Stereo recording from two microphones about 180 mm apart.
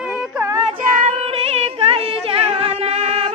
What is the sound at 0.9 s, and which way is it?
Female singing, 45° right (ahead or behind).